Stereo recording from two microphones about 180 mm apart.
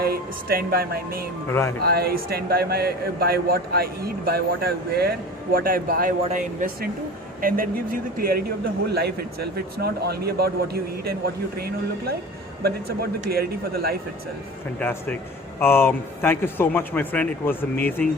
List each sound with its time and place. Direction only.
0.0 s a man's voice: 55° right (ahead or behind)
14.8 s speech: 10° left (ahead or behind)